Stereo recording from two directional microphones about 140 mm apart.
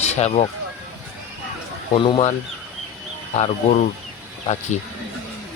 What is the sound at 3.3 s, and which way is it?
Speech, 50° left (ahead or behind).